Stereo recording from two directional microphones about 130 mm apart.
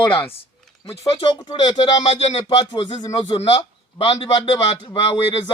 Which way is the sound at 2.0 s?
55° left (ahead or behind).